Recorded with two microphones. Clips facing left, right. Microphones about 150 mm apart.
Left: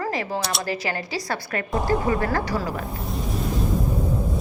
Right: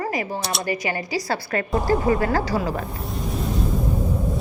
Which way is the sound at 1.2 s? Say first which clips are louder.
Right 3 dB; 30° right (ahead or behind).